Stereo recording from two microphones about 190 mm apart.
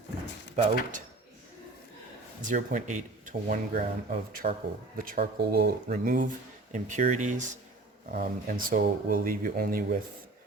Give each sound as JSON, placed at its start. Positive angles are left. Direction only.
{"t": 0.5, "sound": "speech", "side_deg": -45}
{"t": 2.5, "sound": "speech", "side_deg": -45}